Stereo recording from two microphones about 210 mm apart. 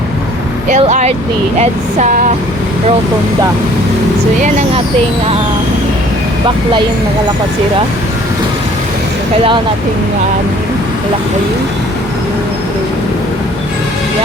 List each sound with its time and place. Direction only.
0.7 s speech: 35° right (ahead or behind)